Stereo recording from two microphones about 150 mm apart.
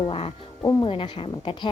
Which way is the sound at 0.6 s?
30° left (ahead or behind).